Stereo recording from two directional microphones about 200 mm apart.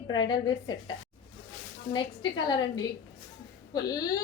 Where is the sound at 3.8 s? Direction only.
20° left (ahead or behind).